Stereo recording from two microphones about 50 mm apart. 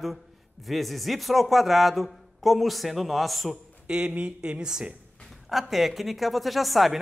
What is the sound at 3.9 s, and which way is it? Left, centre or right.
Speech, centre.